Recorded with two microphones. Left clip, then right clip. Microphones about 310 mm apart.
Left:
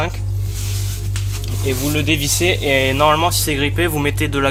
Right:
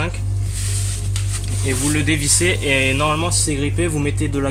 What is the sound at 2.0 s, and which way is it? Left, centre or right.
Speech, centre.